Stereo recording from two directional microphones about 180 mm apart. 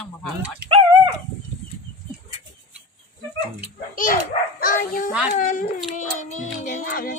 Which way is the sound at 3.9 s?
50° left (ahead or behind).